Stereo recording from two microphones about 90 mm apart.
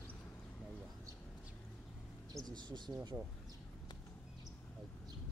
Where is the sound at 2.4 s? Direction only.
55° right (ahead or behind).